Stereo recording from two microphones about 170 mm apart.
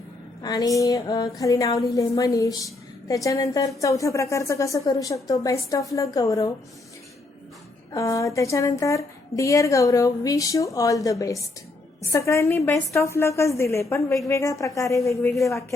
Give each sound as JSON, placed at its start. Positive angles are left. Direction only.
{"t": 0.4, "sound": "a woman's voice", "side_deg": 20}
{"t": 7.9, "sound": "a woman's voice", "side_deg": 20}